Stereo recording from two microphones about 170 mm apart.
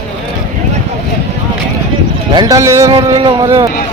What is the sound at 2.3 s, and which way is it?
A man's voice, 20° right (ahead or behind).